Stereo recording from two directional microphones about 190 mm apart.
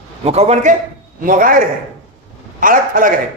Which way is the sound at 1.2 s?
45° right (ahead or behind).